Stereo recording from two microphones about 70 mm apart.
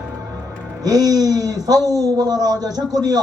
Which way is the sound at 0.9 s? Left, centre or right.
Right.